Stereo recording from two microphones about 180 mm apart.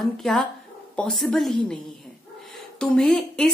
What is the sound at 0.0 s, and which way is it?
A woman's voice, centre (ahead or behind).